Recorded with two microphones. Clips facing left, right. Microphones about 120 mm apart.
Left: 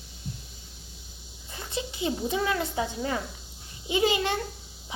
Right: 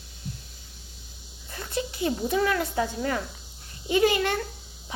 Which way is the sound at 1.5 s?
20° left (ahead or behind).